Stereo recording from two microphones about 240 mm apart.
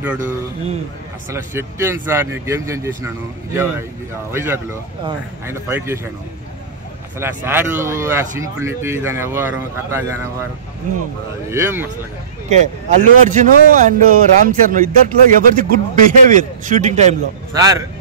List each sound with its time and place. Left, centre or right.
1.3 s speech: centre
4.3 s speech: centre
7.2 s speech: centre
11.5 s speech: centre
12.4 s speech: right
17.6 s speech: centre